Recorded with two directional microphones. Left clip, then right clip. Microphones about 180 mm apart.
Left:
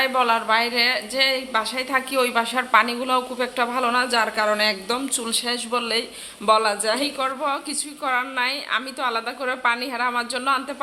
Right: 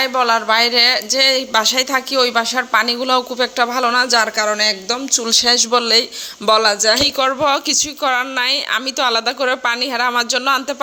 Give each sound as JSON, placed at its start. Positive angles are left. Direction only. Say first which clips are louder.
{"t": 0.0, "sound": "speech", "louder": "right 4 dB", "side_deg": -30}
{"t": 5.2, "sound": "a woman's voice", "louder": "right 11 dB", "side_deg": -30}